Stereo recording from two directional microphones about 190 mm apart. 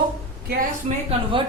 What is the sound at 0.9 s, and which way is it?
Speech, 30° right (ahead or behind).